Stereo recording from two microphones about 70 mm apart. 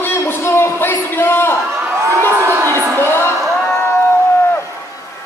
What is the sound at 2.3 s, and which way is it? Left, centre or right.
Crowd, right.